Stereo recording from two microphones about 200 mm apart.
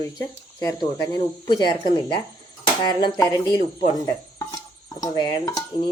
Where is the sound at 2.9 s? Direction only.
20° left (ahead or behind).